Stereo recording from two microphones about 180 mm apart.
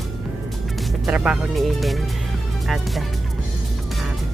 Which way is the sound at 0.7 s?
Centre (ahead or behind).